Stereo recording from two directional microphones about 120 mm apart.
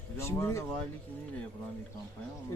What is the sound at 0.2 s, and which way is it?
Speech, 20° left (ahead or behind).